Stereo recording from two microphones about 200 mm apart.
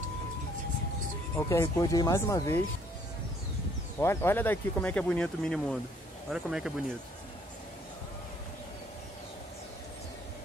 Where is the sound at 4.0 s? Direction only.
10° left (ahead or behind).